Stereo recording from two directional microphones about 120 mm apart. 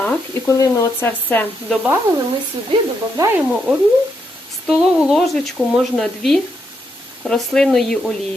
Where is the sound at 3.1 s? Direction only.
20° right (ahead or behind).